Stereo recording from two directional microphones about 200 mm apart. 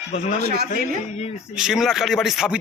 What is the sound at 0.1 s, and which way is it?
Speech, 30° left (ahead or behind).